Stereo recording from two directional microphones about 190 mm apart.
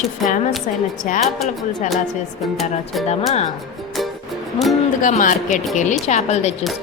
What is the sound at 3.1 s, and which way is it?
Speech, 35° left (ahead or behind).